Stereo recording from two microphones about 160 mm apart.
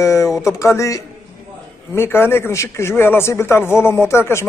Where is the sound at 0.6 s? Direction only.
20° left (ahead or behind).